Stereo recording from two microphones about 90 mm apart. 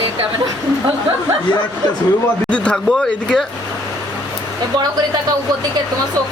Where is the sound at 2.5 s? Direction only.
15° left (ahead or behind).